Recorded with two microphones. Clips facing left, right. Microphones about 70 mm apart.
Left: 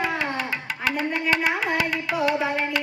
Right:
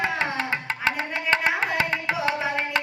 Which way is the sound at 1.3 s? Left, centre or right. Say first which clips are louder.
Right 2 dB; right.